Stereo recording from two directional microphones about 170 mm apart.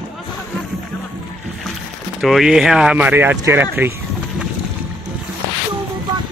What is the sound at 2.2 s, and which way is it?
Speech, centre (ahead or behind).